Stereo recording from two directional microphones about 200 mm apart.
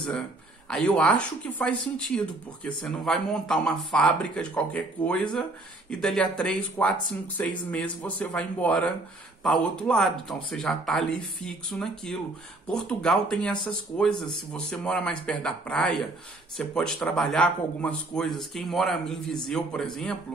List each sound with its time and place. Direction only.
0.7 s speech: 5° left (ahead or behind)